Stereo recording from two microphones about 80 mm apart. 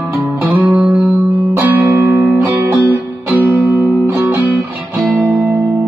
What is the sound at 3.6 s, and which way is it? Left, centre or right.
Music, right.